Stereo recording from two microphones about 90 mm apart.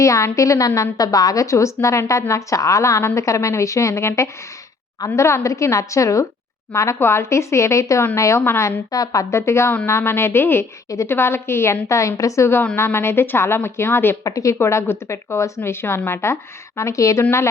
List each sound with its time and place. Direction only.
0.0 s a woman's voice: 35° left (ahead or behind)
8.9 s a woman's voice: 40° left (ahead or behind)
12.7 s a woman's voice: 25° left (ahead or behind)
14.3 s a woman's voice: 40° left (ahead or behind)